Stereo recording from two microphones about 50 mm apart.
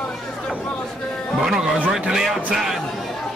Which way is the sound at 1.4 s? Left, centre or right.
Centre.